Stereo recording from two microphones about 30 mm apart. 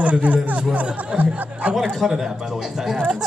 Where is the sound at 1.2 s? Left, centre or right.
Right.